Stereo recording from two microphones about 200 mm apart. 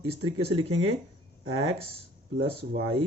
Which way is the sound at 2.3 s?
70° right (ahead or behind).